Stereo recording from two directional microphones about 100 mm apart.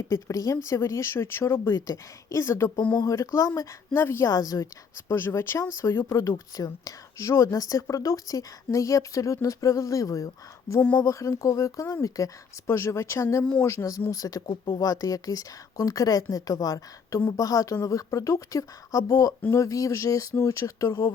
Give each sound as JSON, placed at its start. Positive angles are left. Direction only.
{"t": 0.1, "sound": "a woman's voice", "side_deg": 35}
{"t": 10.8, "sound": "speech", "side_deg": 15}
{"t": 11.0, "sound": "a woman's voice", "side_deg": 30}
{"t": 14.4, "sound": "speech", "side_deg": 60}
{"t": 14.8, "sound": "speech", "side_deg": 35}